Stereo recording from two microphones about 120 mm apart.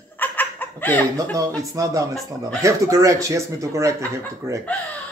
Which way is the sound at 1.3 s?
30° right (ahead or behind).